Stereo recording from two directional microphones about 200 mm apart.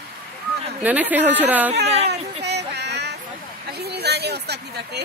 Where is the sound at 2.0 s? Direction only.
55° right (ahead or behind).